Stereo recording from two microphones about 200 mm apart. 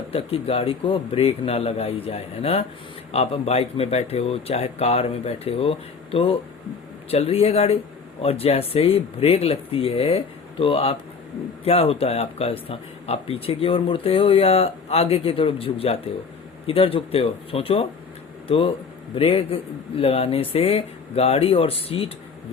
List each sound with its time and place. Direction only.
0.1 s speech: 30° left (ahead or behind)